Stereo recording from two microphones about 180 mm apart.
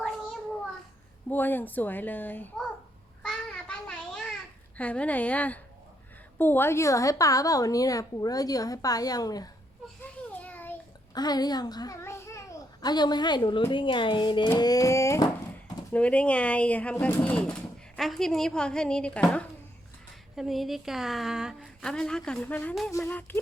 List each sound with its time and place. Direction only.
1.3 s speech: 10° left (ahead or behind)
3.2 s child singing: 5° left (ahead or behind)
4.8 s a woman's voice: 5° left (ahead or behind)
10.3 s a sound: 10° left (ahead or behind)
11.1 s a child's voice: 20° left (ahead or behind)